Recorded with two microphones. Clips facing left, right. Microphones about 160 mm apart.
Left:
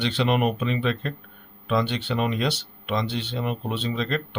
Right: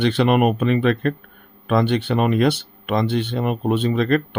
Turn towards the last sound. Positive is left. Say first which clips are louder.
# right 9 dB
turn(degrees=-55)  # may be behind; listen again after turning